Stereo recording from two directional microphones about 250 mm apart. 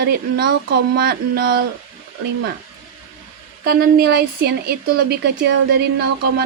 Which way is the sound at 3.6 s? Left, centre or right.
Right.